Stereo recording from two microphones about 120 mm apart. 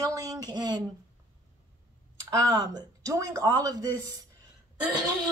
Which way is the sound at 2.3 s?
30° right (ahead or behind).